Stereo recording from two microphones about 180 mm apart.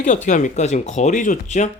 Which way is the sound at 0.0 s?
45° left (ahead or behind).